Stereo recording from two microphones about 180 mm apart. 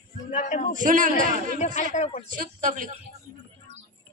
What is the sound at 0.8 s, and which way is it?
Speech, 45° right (ahead or behind).